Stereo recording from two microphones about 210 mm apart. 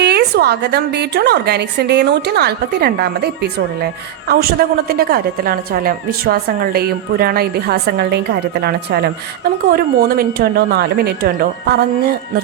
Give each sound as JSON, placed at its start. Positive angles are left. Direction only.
{"t": 0.0, "sound": "a woman's voice", "side_deg": -50}